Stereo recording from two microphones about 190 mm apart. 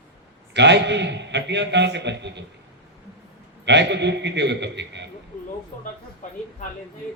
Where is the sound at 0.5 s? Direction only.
65° right (ahead or behind).